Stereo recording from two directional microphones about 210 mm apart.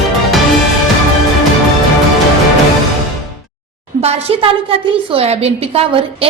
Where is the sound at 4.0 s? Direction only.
30° right (ahead or behind).